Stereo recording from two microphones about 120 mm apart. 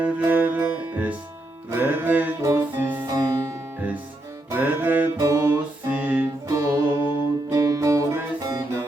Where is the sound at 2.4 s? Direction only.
25° right (ahead or behind).